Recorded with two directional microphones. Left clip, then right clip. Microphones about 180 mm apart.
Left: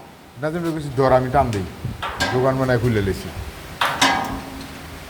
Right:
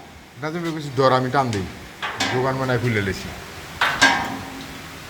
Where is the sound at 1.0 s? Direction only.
15° left (ahead or behind).